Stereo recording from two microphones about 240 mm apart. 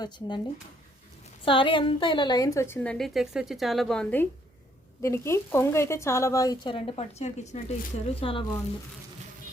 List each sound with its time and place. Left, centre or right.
0.0 s speech: centre
1.5 s a woman's voice: left